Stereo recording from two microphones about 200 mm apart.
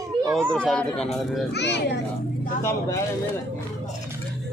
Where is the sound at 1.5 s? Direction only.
60° left (ahead or behind).